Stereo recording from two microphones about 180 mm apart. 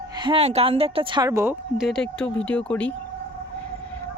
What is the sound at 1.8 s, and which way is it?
Speech, 5° left (ahead or behind).